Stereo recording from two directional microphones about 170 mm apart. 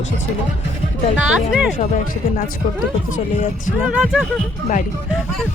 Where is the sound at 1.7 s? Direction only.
45° left (ahead or behind).